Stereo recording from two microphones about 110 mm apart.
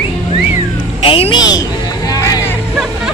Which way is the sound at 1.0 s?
60° left (ahead or behind).